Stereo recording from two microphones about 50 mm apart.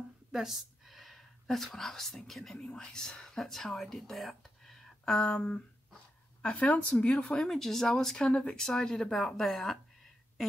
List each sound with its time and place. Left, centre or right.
0.3 s speech: centre
5.3 s speech: left
7.4 s speech: centre